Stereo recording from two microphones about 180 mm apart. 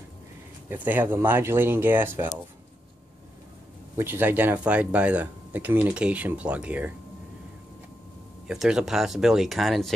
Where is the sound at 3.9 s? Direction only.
10° right (ahead or behind).